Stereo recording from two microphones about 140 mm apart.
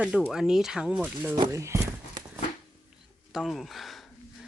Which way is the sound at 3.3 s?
Centre (ahead or behind).